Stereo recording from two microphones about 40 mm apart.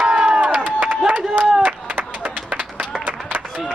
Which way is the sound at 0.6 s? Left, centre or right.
Right.